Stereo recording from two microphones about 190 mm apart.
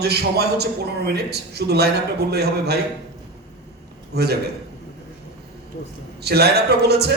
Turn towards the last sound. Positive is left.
turn(degrees=-60)  # may be behind; listen again after turning